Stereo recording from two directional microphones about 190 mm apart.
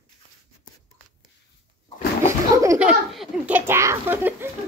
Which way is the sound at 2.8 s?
5° right (ahead or behind).